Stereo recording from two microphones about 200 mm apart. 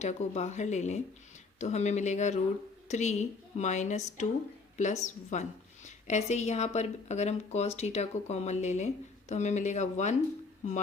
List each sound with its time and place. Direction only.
0.0 s a woman's voice: 35° left (ahead or behind)